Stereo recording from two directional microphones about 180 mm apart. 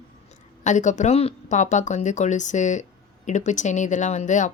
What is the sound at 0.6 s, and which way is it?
Speech, 40° left (ahead or behind).